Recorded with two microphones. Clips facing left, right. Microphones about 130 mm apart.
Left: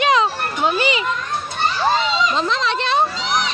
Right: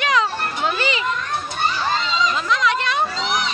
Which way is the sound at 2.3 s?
30° left (ahead or behind).